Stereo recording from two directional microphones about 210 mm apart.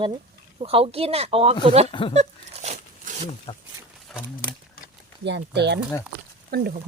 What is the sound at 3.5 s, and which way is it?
Speech, 25° left (ahead or behind).